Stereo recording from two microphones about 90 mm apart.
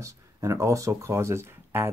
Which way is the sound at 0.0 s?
35° right (ahead or behind).